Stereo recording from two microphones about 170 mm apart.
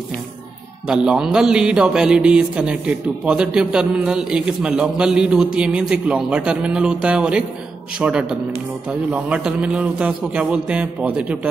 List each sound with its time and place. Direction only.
0.8 s a man's voice: 5° right (ahead or behind)